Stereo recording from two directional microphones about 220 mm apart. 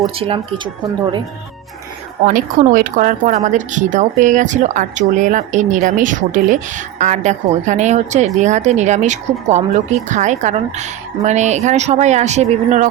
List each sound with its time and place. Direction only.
0.2 s speech: 25° right (ahead or behind)
2.2 s speech: 35° right (ahead or behind)